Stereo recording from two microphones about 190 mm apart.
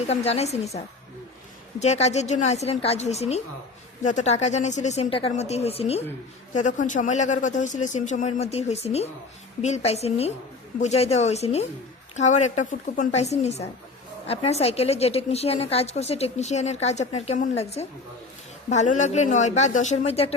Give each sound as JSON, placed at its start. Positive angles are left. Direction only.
{"t": 0.1, "sound": "a woman's voice", "side_deg": 35}
{"t": 1.8, "sound": "a woman's voice", "side_deg": 35}